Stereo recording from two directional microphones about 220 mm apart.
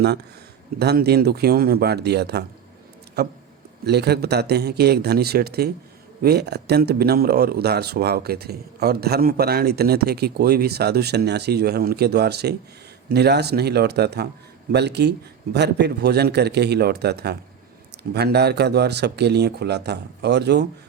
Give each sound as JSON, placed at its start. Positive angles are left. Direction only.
{"t": 0.8, "sound": "speech", "side_deg": -45}